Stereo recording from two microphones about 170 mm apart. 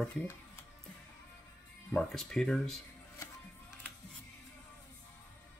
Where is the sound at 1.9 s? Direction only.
5° left (ahead or behind).